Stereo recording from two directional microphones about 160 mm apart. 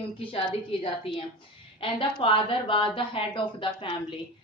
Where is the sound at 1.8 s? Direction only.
35° left (ahead or behind).